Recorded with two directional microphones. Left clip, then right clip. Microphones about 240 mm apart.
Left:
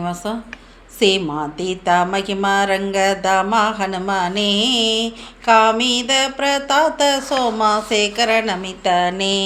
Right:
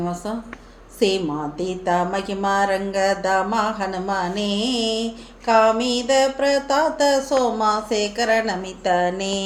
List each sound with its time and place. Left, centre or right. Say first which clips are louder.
0.0 s speech: left 3 dB; left